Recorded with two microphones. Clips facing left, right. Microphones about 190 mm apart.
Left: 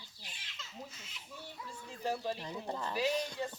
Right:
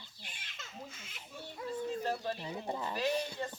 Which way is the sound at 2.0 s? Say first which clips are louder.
Even; 10° left (ahead or behind).